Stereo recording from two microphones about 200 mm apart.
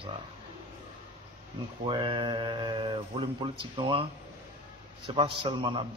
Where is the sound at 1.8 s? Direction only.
25° right (ahead or behind).